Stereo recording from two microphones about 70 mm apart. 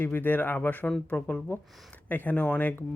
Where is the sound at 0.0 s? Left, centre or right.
Left.